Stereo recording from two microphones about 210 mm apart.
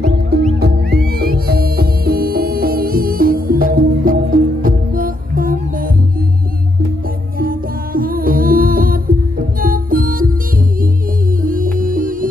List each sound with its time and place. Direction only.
0.6 s music: 45° right (ahead or behind)
7.3 s music: 45° right (ahead or behind)
11.4 s music: 40° right (ahead or behind)